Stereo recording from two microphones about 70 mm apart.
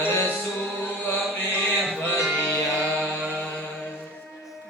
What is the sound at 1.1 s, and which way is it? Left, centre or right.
Chant, left.